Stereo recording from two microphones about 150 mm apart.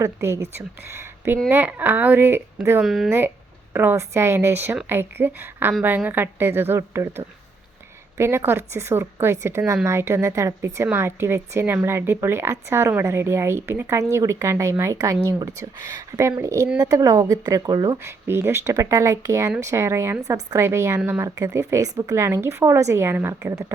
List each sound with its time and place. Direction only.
0.0 s a woman's voice: 20° right (ahead or behind)
2.8 s speech: centre (ahead or behind)
3.7 s a woman's voice: 15° right (ahead or behind)
8.2 s a woman's voice: 15° right (ahead or behind)